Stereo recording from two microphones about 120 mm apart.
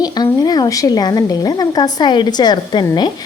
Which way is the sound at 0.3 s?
35° left (ahead or behind).